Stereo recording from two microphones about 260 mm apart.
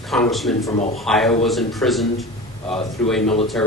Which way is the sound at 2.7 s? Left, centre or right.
Left.